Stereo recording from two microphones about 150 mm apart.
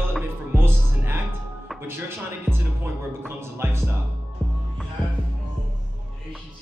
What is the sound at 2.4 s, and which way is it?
Music, 15° right (ahead or behind).